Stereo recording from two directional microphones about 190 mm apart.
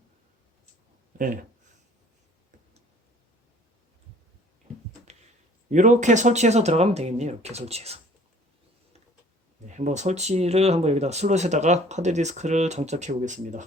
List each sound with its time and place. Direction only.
1.2 s speech: 45° right (ahead or behind)
5.7 s speech: 40° right (ahead or behind)
9.6 s speech: 40° right (ahead or behind)